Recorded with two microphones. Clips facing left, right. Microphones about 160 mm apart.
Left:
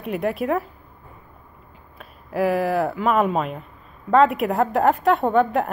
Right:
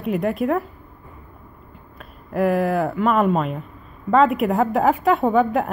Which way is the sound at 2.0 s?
Centre (ahead or behind).